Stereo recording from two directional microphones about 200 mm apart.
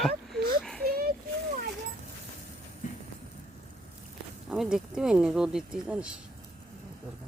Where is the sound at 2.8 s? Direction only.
40° left (ahead or behind).